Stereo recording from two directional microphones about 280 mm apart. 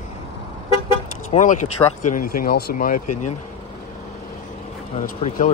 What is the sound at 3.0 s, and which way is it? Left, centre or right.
Speech, left.